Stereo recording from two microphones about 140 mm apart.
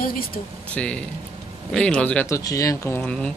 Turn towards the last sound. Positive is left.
turn(degrees=5)  # may be behind; listen again after turning